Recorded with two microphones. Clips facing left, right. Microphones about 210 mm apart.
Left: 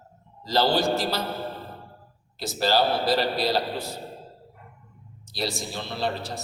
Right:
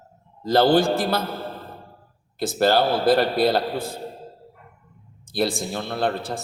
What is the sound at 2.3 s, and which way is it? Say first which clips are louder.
A man's voice: right 4 dB; 55° right (ahead or behind).